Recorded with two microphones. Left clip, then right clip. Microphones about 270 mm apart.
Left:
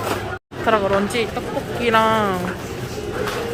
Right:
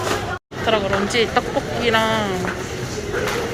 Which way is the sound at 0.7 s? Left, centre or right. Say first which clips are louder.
Left 1 dB; centre.